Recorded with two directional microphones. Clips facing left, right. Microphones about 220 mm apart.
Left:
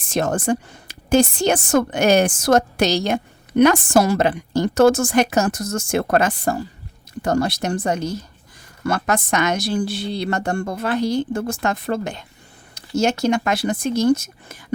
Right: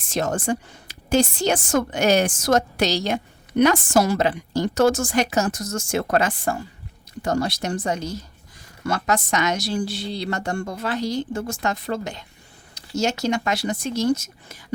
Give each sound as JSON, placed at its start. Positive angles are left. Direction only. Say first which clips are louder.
{"t": 0.1, "sound": "a woman's voice", "louder": "left 3 dB", "side_deg": 50}
{"t": 7.2, "sound": "a woman's voice", "louder": "left 3 dB", "side_deg": 55}